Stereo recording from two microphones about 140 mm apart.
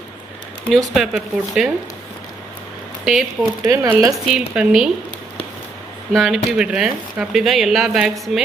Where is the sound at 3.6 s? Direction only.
20° right (ahead or behind).